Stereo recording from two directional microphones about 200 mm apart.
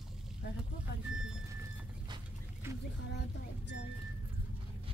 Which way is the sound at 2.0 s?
20° right (ahead or behind).